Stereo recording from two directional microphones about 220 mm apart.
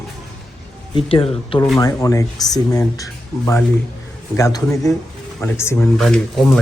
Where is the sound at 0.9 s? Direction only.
25° left (ahead or behind).